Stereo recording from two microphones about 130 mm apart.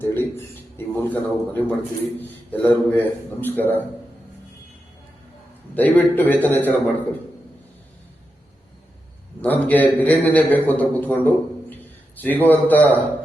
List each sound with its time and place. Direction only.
0.0 s a man's voice: 15° left (ahead or behind)
5.7 s a man's voice: 15° left (ahead or behind)
9.4 s a man's voice: 15° left (ahead or behind)
11.7 s a sound: 15° left (ahead or behind)
12.5 s a man's voice: 15° left (ahead or behind)